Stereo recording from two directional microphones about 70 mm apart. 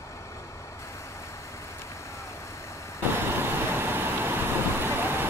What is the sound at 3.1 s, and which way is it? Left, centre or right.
Vehicle, right.